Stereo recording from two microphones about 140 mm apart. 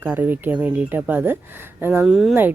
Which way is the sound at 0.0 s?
15° right (ahead or behind).